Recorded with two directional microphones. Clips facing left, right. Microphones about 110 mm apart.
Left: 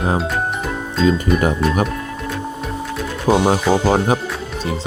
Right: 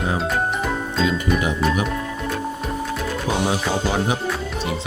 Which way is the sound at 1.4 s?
45° left (ahead or behind).